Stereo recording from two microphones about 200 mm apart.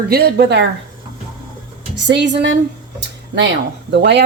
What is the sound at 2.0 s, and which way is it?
Speech, 60° right (ahead or behind).